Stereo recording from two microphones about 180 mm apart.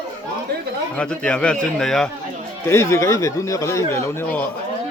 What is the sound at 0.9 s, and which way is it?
A man's voice, 5° left (ahead or behind).